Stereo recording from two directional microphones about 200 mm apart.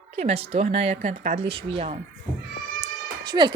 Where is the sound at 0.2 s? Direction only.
30° right (ahead or behind).